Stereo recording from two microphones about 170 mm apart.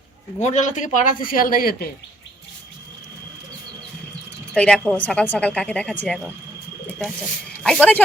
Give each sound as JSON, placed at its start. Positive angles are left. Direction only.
{"t": 0.3, "sound": "speech", "side_deg": 45}
{"t": 4.5, "sound": "speech", "side_deg": 5}
{"t": 7.6, "sound": "speech", "side_deg": 5}